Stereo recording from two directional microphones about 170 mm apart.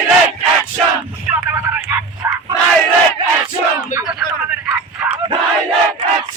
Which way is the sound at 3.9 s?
5° right (ahead or behind).